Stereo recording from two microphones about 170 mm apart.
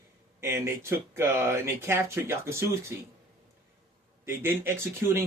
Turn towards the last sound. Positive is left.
turn(degrees=-15)  # may be behind; listen again after turning